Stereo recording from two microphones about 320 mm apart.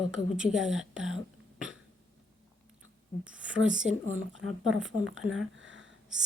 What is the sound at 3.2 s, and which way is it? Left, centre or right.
A woman's voice, centre.